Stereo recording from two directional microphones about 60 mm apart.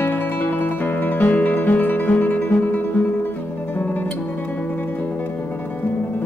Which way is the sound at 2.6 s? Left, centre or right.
Left.